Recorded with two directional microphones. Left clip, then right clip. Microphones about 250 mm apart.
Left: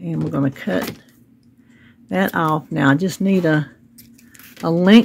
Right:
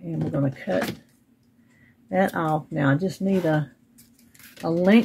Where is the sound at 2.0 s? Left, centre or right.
Left.